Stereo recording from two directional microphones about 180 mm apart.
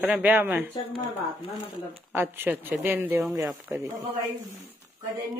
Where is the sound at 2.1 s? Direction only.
10° right (ahead or behind).